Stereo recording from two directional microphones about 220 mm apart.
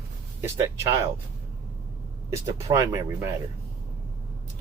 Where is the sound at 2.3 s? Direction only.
15° right (ahead or behind).